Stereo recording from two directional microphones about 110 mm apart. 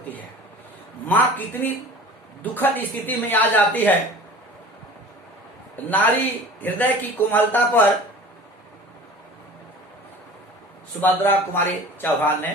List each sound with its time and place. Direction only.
1.0 s a man's voice: 15° left (ahead or behind)
5.7 s a man's voice: 15° left (ahead or behind)
11.0 s speech: 20° left (ahead or behind)